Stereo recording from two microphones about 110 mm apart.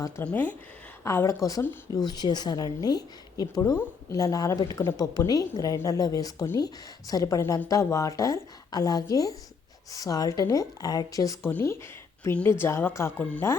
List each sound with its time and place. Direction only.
0.3 s speech: 15° left (ahead or behind)
1.0 s a woman's voice: 25° left (ahead or behind)
11.4 s a woman's voice: 20° left (ahead or behind)